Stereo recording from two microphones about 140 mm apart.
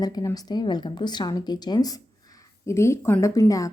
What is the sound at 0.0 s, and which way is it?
A woman's voice, 30° left (ahead or behind).